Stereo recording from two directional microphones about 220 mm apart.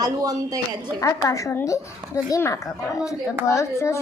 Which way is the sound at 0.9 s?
15° left (ahead or behind).